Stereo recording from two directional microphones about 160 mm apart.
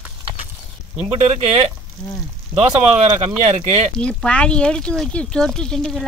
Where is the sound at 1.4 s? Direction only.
40° right (ahead or behind).